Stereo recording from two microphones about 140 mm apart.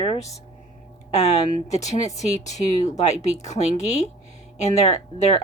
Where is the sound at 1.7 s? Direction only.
55° left (ahead or behind).